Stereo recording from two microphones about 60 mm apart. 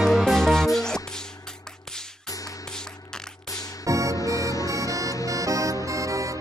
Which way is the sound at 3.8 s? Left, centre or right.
Right.